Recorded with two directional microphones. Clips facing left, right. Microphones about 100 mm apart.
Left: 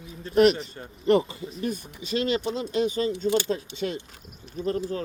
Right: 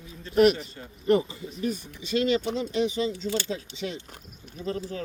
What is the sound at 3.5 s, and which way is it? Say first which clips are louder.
Speech: left 4 dB; 50° left (ahead or behind).